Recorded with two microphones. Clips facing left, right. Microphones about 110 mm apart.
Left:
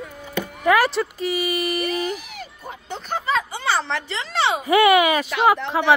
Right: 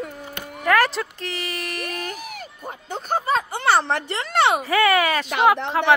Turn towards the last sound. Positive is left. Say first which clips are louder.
# even
turn(degrees=5)  # may be behind; listen again after turning